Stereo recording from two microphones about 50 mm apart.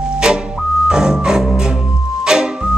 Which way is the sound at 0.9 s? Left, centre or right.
Centre.